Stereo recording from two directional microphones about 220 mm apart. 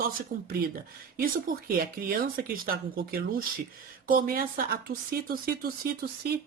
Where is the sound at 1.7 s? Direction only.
40° right (ahead or behind).